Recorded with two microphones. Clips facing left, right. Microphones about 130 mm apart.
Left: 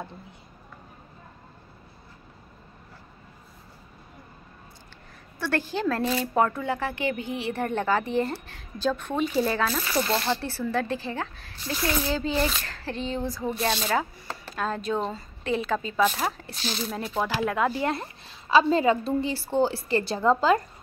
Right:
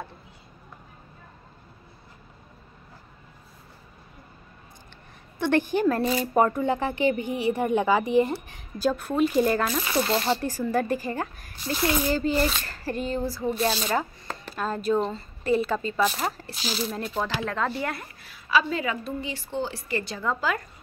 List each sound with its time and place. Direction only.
5.4 s speech: 15° right (ahead or behind)
9.9 s speech: 20° right (ahead or behind); by 17.7 s 10° left (ahead or behind)
17.8 s a woman's voice: 25° left (ahead or behind)